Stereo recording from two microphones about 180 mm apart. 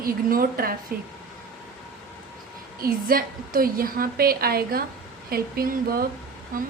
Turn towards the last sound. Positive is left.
turn(degrees=-55)  # may be behind; listen again after turning